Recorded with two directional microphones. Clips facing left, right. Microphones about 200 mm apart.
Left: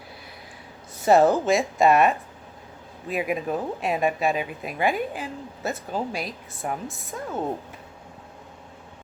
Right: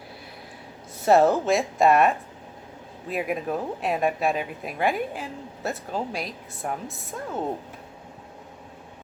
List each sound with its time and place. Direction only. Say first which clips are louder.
1.0 s speech: left 1 dB; centre (ahead or behind)